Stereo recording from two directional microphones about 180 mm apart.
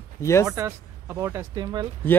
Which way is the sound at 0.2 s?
15° left (ahead or behind).